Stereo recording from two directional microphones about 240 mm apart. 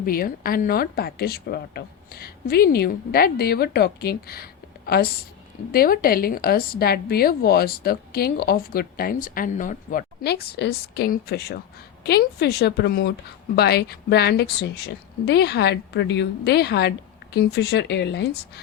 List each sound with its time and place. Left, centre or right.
0.0 s a woman's voice: left